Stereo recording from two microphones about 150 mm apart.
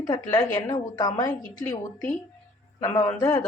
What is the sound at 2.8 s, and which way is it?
Speech, 25° left (ahead or behind).